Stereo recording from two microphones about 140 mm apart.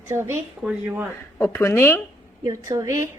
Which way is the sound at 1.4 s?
15° left (ahead or behind).